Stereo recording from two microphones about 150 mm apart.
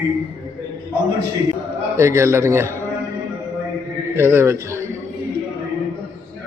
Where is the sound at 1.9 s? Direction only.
20° right (ahead or behind).